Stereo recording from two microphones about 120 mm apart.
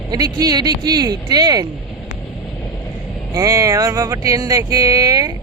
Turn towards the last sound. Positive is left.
turn(degrees=-30)  # may be behind; listen again after turning